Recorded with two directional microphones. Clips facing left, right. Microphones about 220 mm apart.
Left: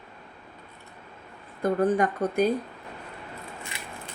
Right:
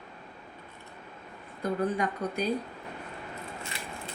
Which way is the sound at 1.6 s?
50° left (ahead or behind).